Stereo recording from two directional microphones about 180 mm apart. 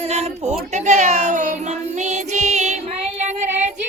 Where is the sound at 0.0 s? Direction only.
35° right (ahead or behind).